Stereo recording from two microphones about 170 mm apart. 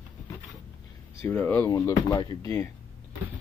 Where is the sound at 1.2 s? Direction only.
15° left (ahead or behind).